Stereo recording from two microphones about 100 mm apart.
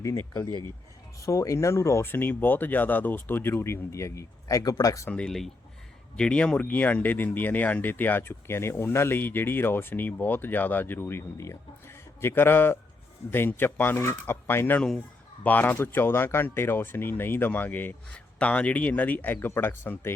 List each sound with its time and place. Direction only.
0.0 s speech: 30° left (ahead or behind)
5.0 s speech: 10° left (ahead or behind)
14.8 s a man's voice: centre (ahead or behind)
15.4 s speech: 15° left (ahead or behind)